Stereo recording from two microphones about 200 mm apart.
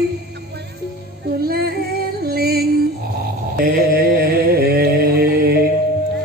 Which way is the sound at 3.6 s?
50° right (ahead or behind).